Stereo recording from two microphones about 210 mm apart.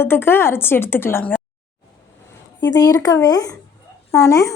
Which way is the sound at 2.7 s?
15° left (ahead or behind).